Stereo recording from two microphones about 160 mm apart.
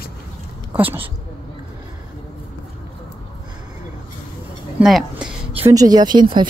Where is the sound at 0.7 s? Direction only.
10° right (ahead or behind).